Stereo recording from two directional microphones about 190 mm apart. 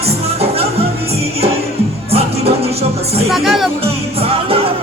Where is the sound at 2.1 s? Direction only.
30° right (ahead or behind).